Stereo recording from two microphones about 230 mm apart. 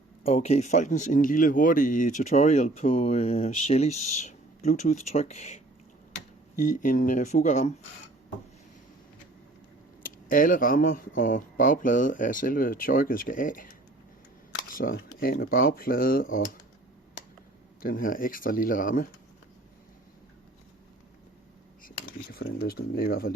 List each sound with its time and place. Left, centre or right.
0.2 s speech: left
6.6 s speech: left
10.2 s speech: left
14.7 s camera: left
15.2 s speech: left
16.2 s speech: left
17.8 s speech: left
21.8 s a sound: left
23.0 s speech: left